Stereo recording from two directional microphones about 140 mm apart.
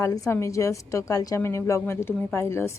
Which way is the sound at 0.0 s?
20° left (ahead or behind).